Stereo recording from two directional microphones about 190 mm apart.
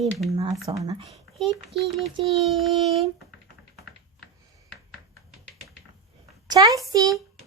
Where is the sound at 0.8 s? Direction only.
20° right (ahead or behind).